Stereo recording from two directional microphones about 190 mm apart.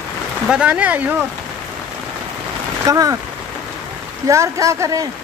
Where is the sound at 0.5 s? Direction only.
5° right (ahead or behind).